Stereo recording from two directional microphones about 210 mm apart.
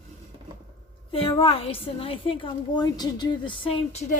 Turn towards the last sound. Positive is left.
turn(degrees=30)  # may be behind; listen again after turning